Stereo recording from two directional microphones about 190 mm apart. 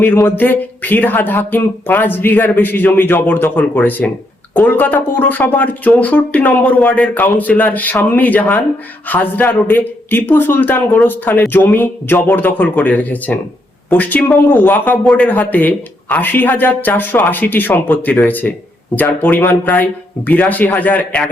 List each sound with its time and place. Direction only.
0.0 s speech: 10° left (ahead or behind)